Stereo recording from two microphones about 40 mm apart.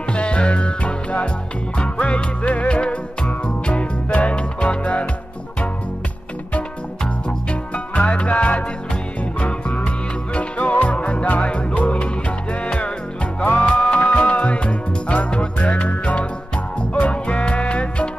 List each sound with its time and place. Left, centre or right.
0.1 s music: left
7.2 s music: left
13.6 s music: left